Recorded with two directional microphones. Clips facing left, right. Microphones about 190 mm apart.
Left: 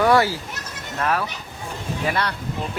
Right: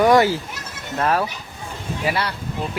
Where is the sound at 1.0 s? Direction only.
30° right (ahead or behind).